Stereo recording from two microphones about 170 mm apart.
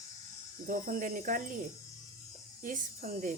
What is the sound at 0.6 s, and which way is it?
Speech, 50° right (ahead or behind).